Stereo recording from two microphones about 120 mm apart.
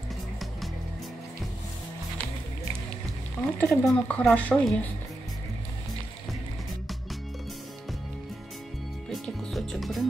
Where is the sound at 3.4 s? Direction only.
15° left (ahead or behind).